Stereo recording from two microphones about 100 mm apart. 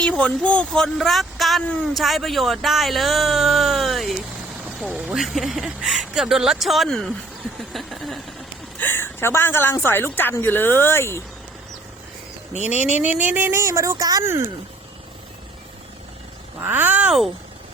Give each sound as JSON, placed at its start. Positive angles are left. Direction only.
{"t": 0.0, "sound": "speech", "side_deg": 10}
{"t": 8.8, "sound": "a woman's voice", "side_deg": 20}
{"t": 12.7, "sound": "speech", "side_deg": -20}
{"t": 16.6, "sound": "speech", "side_deg": -20}